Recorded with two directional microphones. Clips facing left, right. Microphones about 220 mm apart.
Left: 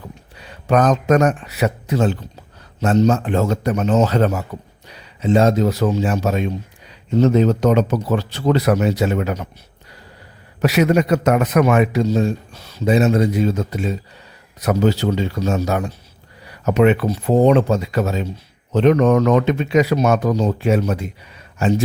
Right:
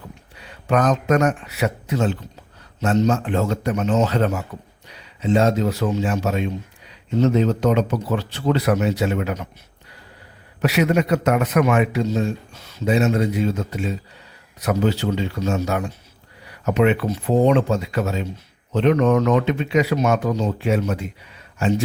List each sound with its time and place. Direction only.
0.7 s speech: 35° left (ahead or behind)
10.6 s speech: 40° left (ahead or behind)